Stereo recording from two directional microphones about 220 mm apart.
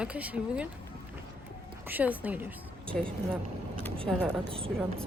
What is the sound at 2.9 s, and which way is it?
A woman's voice, 5° left (ahead or behind).